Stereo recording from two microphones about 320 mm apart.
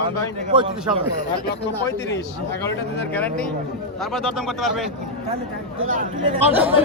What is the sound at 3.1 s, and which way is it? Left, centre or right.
Speech, centre.